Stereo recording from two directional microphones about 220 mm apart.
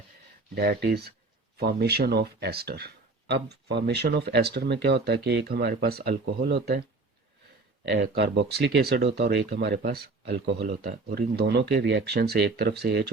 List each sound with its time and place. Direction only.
0.5 s speech: 45° right (ahead or behind)
7.9 s speech: 50° right (ahead or behind)